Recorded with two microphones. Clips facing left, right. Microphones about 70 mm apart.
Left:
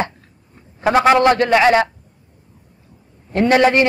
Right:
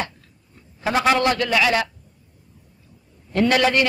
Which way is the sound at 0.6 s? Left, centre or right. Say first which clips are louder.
Left 7 dB; left.